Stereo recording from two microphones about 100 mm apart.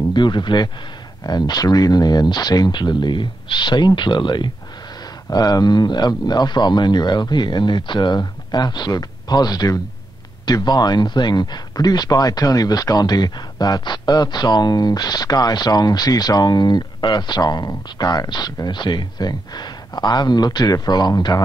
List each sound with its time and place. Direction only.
0.1 s speech: 50° left (ahead or behind)
5.3 s speech: 40° left (ahead or behind)